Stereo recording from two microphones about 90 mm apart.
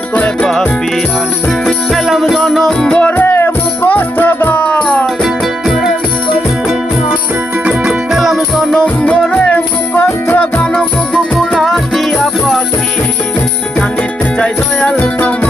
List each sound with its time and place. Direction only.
1.6 s music: 5° right (ahead or behind)
3.1 s music: 20° left (ahead or behind)
5.2 s music: 5° right (ahead or behind)
7.6 s music: 10° right (ahead or behind)
8.7 s music: 10° left (ahead or behind)
14.3 s music: 10° left (ahead or behind)